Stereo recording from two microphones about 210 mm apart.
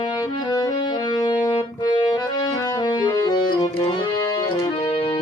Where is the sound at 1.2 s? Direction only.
20° left (ahead or behind).